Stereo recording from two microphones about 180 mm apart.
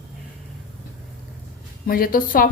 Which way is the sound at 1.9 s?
55° left (ahead or behind).